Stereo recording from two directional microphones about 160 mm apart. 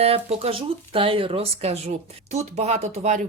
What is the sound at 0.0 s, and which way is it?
Speech, 40° right (ahead or behind).